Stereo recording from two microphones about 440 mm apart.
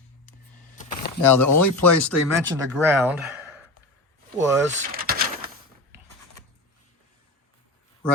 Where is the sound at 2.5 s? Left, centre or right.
Centre.